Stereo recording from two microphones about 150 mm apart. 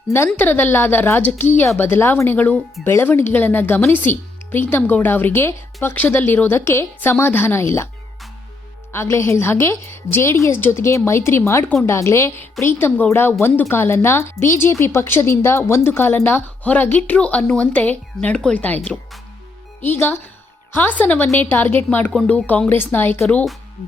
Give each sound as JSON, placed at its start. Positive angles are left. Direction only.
{"t": 0.3, "sound": "speech", "side_deg": 10}
{"t": 8.9, "sound": "speech", "side_deg": 15}